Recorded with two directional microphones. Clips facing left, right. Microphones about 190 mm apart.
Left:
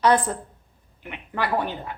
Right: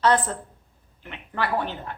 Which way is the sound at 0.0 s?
15° left (ahead or behind).